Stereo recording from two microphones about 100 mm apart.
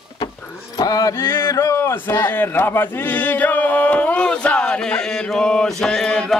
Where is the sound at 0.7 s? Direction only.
40° left (ahead or behind).